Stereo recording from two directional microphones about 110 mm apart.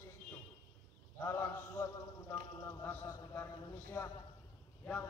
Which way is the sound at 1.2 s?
30° left (ahead or behind).